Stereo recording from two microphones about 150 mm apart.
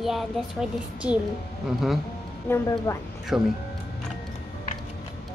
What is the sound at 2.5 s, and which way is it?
Speech, 15° left (ahead or behind).